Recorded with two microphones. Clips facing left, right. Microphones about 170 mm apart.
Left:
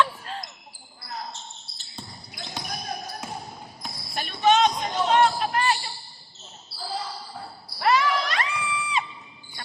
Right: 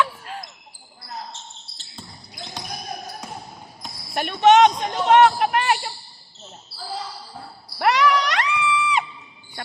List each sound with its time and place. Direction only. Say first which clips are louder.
0.0 s basketball bounce: even; 10° right (ahead or behind)
4.1 s speech: right 6 dB; 65° right (ahead or behind)
7.8 s a sound: right 3 dB; 75° right (ahead or behind)
8.8 s music: right 5 dB; 75° right (ahead or behind)